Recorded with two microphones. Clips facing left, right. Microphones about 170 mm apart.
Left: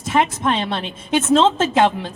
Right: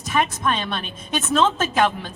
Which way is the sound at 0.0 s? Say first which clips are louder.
Left 4 dB; 25° left (ahead or behind).